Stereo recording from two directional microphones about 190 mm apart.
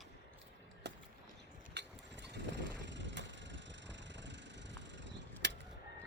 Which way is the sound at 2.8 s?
70° right (ahead or behind).